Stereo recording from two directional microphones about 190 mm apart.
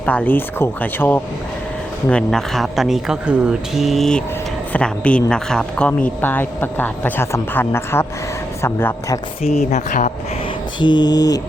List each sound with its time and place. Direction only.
0.0 s a man's voice: 10° left (ahead or behind)
9.4 s speech: 35° left (ahead or behind)
10.8 s mantra: 25° left (ahead or behind)